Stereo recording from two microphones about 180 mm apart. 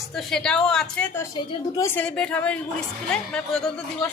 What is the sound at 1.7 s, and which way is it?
Speech, 15° left (ahead or behind).